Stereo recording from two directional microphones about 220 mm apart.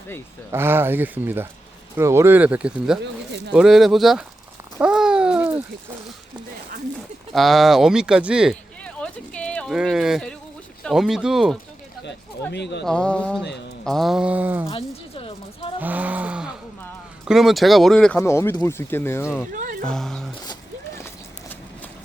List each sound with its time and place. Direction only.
0.5 s speech: 10° right (ahead or behind)
3.0 s speech: 50° right (ahead or behind)
3.5 s speech: centre (ahead or behind)
4.8 s babbling: 5° right (ahead or behind)
7.3 s speech: centre (ahead or behind)
12.0 s speech: 50° left (ahead or behind)
12.8 s speech: 5° left (ahead or behind)
14.7 s a sound: 25° left (ahead or behind)
15.8 s a sound: 5° right (ahead or behind)
17.2 s speech: centre (ahead or behind)
19.5 s music: 35° right (ahead or behind)
19.8 s speech: centre (ahead or behind)
20.4 s a sound: 15° left (ahead or behind)